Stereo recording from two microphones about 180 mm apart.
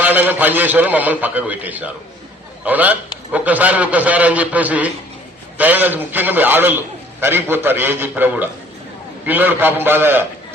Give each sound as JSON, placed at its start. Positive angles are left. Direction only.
{"t": 0.0, "sound": "a man's voice", "side_deg": -10}